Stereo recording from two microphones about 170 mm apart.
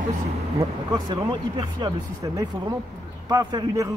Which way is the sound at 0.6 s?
25° right (ahead or behind).